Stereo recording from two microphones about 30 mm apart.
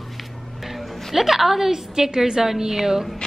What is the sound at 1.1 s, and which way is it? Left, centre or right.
Speech, centre.